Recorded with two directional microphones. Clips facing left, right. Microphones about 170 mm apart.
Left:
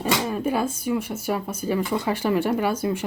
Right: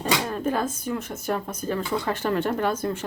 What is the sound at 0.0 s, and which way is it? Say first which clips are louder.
Speech: left 2 dB; 10° left (ahead or behind).